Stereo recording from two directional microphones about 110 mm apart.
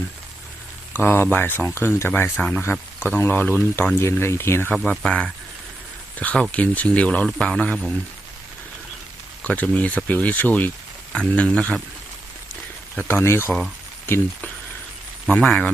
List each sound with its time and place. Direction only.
0.9 s speech: 20° left (ahead or behind)
2.3 s speech: 10° left (ahead or behind)
3.2 s speech: 20° left (ahead or behind)
4.7 s speech: 5° left (ahead or behind)
9.4 s speech: 15° left (ahead or behind)
13.1 s speech: 20° left (ahead or behind)
15.3 s speech: 10° left (ahead or behind)